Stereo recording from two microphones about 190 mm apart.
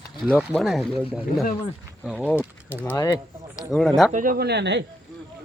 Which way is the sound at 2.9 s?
20° left (ahead or behind).